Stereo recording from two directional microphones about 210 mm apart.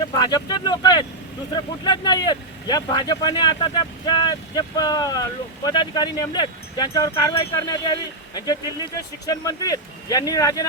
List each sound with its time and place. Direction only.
0.0 s speech: 20° left (ahead or behind)